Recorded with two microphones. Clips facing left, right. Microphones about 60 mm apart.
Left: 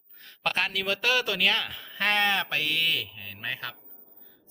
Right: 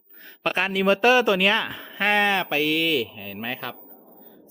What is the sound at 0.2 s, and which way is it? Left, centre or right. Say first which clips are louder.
A man's voice: right 4 dB; centre.